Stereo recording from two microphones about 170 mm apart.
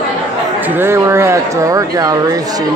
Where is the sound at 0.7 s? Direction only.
15° right (ahead or behind).